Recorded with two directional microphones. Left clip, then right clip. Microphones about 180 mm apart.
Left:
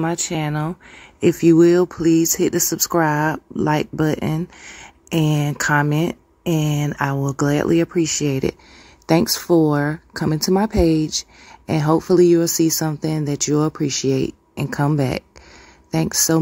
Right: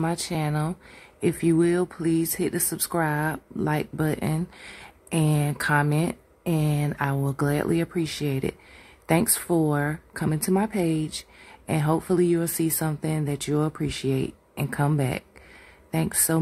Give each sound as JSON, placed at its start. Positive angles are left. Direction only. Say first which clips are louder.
{"t": 0.3, "sound": "speech", "louder": "left 5 dB", "side_deg": 5}
{"t": 1.2, "sound": "speech", "louder": "left 9 dB", "side_deg": 25}